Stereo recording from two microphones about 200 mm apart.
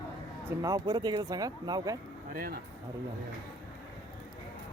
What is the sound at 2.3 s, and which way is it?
Speech, 45° right (ahead or behind).